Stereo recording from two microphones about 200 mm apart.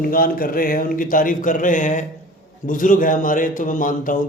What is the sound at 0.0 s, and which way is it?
A man's voice, 45° left (ahead or behind).